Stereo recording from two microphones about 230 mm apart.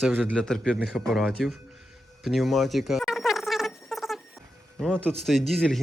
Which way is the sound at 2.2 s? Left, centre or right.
Centre.